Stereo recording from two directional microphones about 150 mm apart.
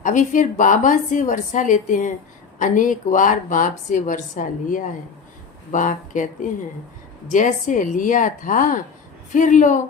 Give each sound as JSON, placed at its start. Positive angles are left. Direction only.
{"t": 0.0, "sound": "speech", "side_deg": 60}